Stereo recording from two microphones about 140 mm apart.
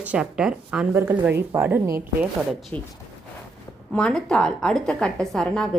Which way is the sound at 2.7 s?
15° left (ahead or behind).